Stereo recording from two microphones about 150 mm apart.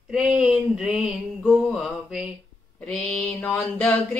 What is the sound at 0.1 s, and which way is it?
Speech, 5° right (ahead or behind).